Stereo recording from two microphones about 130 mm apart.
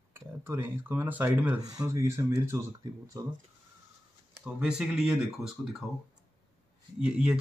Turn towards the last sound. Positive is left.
turn(degrees=-10)  # may be behind; listen again after turning